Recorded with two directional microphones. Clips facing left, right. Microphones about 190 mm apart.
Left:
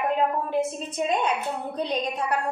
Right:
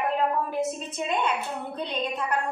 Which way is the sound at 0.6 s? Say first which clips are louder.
Left 2 dB; 40° left (ahead or behind).